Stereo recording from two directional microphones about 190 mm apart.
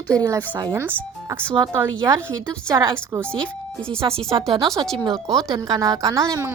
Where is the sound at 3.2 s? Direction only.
5° left (ahead or behind).